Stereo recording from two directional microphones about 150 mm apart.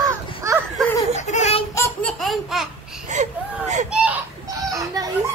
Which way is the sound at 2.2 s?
Centre (ahead or behind).